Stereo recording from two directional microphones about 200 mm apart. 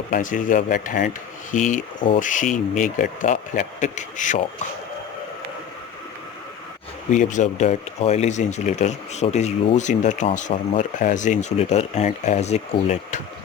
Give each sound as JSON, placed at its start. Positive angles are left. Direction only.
{"t": 0.1, "sound": "speech", "side_deg": 40}
{"t": 7.1, "sound": "speech", "side_deg": 40}